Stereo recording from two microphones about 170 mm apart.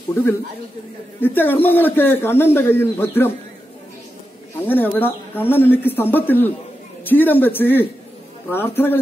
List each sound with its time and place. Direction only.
1.2 s a man's voice: 10° left (ahead or behind)
4.6 s a man's voice: 10° left (ahead or behind)